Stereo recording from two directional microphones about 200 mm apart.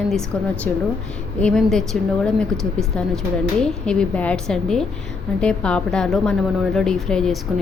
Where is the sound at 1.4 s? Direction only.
5° left (ahead or behind).